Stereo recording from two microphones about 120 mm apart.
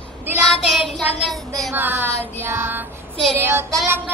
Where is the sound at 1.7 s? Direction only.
15° right (ahead or behind).